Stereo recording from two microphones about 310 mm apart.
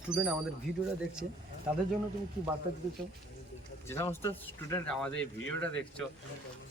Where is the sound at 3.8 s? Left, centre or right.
Centre.